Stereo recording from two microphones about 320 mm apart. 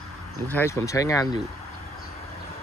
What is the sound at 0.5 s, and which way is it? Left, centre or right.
Speech, centre.